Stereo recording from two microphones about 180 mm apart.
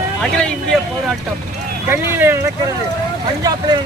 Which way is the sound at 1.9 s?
10° right (ahead or behind).